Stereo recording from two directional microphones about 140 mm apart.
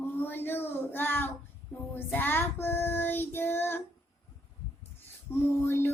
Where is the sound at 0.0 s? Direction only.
15° left (ahead or behind).